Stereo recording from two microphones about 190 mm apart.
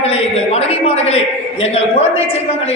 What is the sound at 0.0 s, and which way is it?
A man's voice, 35° left (ahead or behind).